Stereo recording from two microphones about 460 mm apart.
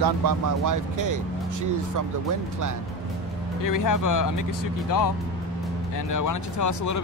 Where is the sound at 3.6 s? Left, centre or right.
Left.